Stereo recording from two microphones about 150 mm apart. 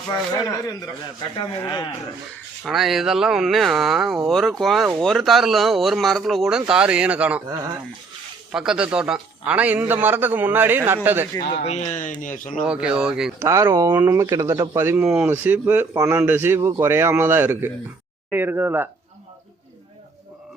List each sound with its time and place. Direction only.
1.4 s speech: 30° left (ahead or behind)
2.6 s speech: centre (ahead or behind)
8.5 s a man's voice: 5° right (ahead or behind)
11.6 s speech: 50° left (ahead or behind)
12.6 s speech: 5° right (ahead or behind)
13.4 s speech: 20° right (ahead or behind)
14.9 s a man's voice: 5° right (ahead or behind)